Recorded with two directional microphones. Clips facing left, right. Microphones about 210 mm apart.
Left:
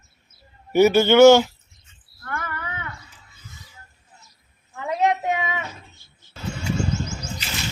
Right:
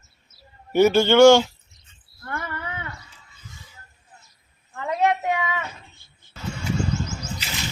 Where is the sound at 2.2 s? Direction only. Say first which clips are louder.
Even; 30° right (ahead or behind).